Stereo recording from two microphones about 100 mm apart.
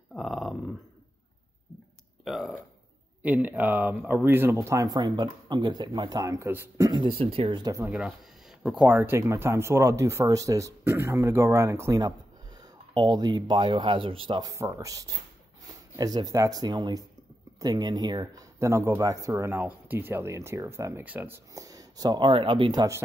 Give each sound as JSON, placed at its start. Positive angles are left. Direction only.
{"t": 0.1, "sound": "a sound", "side_deg": 0}
{"t": 2.2, "sound": "burping", "side_deg": 0}
{"t": 3.2, "sound": "speech", "side_deg": -15}
{"t": 4.6, "sound": "speech", "side_deg": -30}
{"t": 6.8, "sound": "speech", "side_deg": -45}
{"t": 7.1, "sound": "speech", "side_deg": -70}
{"t": 8.8, "sound": "speech", "side_deg": -20}
{"t": 12.9, "sound": "speech", "side_deg": -45}
{"t": 14.4, "sound": "speech", "side_deg": -30}
{"t": 19.5, "sound": "speech", "side_deg": -20}
{"t": 21.5, "sound": "speech", "side_deg": -35}